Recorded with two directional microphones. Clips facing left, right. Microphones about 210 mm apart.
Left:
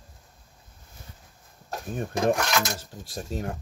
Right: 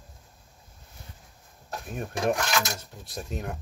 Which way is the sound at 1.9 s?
30° left (ahead or behind).